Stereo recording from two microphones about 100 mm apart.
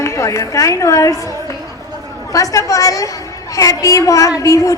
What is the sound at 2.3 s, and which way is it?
A woman's voice, 35° left (ahead or behind).